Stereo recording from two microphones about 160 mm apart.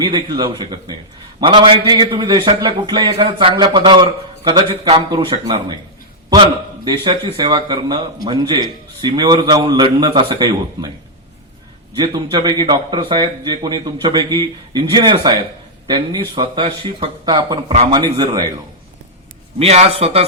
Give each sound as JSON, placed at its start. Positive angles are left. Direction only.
{"t": 0.0, "sound": "a man's voice", "side_deg": -30}
{"t": 6.8, "sound": "a man's voice", "side_deg": -30}
{"t": 11.9, "sound": "a man's voice", "side_deg": -30}
{"t": 19.5, "sound": "a man's voice", "side_deg": -40}